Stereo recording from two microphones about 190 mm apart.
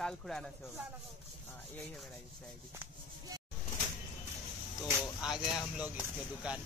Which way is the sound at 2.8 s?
20° right (ahead or behind).